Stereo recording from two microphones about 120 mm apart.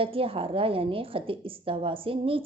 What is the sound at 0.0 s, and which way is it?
A woman's voice, 50° right (ahead or behind).